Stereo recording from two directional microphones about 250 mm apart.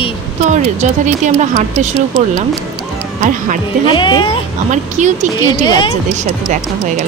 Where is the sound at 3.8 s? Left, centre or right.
Centre.